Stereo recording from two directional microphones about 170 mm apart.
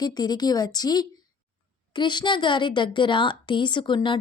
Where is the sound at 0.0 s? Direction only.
25° left (ahead or behind).